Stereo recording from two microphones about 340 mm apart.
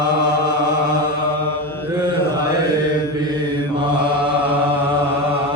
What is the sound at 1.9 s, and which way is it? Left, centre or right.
Mantra, centre.